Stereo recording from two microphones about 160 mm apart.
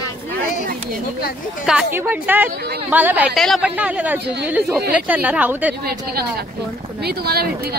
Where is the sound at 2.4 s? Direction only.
90° right.